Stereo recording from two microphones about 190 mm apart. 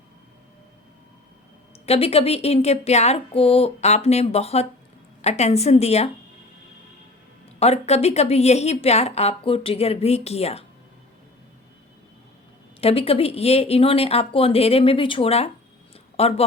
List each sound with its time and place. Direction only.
1.9 s a woman's voice: 30° left (ahead or behind)
7.6 s a woman's voice: 35° left (ahead or behind)
12.8 s a woman's voice: 30° left (ahead or behind)